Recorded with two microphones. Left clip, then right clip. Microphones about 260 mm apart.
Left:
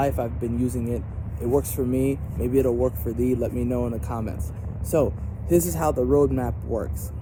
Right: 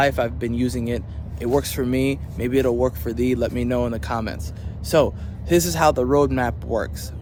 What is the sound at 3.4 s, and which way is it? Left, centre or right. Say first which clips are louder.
Speech: right 4 dB; right.